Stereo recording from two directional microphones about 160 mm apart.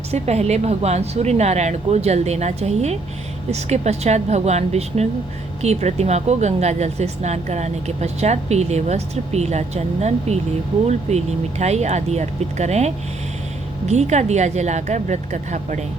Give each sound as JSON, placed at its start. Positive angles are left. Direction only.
{"t": 0.1, "sound": "speech", "side_deg": -40}